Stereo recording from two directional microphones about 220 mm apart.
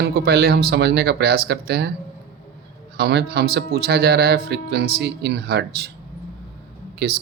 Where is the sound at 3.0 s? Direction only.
50° right (ahead or behind).